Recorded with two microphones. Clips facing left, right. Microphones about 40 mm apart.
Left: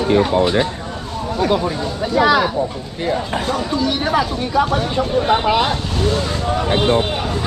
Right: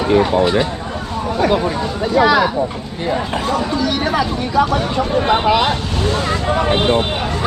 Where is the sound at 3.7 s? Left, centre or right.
Centre.